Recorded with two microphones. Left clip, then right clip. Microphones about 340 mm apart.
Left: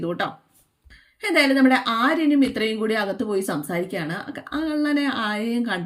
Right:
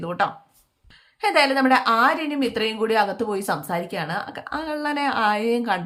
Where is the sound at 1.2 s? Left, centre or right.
Centre.